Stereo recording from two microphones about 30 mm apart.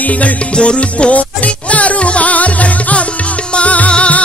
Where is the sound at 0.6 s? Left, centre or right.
Left.